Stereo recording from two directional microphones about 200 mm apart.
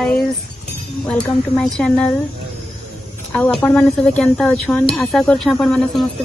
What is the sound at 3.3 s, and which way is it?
Speech, 10° left (ahead or behind).